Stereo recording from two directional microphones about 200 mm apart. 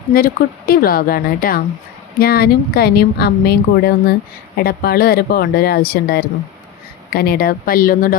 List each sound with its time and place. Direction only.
0.1 s speech: 45° left (ahead or behind)